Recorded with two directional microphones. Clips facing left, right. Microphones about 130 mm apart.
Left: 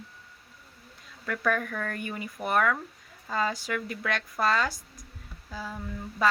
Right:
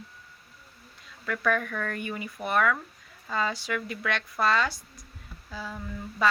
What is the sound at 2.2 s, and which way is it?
Speech, 40° left (ahead or behind).